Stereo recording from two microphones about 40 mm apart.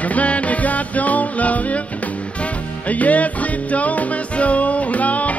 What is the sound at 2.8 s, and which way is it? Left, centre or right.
Music, left.